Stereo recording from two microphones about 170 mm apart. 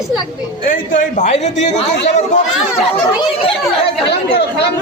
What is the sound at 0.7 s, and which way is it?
A man's voice, 45° left (ahead or behind).